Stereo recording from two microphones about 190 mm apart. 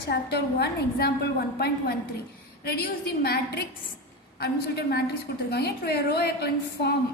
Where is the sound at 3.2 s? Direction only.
55° left (ahead or behind).